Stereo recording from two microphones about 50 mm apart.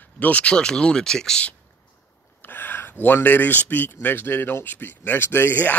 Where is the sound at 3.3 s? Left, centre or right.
Left.